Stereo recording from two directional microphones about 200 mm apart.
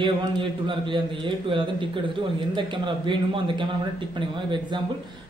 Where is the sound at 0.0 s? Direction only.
25° right (ahead or behind).